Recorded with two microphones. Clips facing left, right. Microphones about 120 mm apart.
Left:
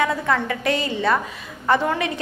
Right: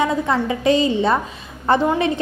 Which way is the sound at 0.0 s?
20° right (ahead or behind).